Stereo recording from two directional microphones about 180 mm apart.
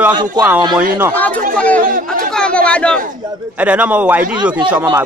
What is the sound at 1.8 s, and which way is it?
Chatter, 50° right (ahead or behind).